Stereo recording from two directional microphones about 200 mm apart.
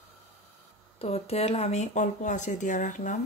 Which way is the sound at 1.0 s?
30° left (ahead or behind).